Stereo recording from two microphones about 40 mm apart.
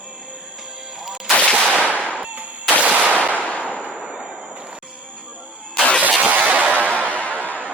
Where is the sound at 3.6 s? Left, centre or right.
Left.